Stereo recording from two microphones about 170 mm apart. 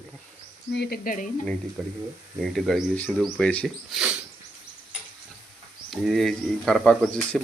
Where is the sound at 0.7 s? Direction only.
70° left (ahead or behind); by 1.3 s 55° left (ahead or behind).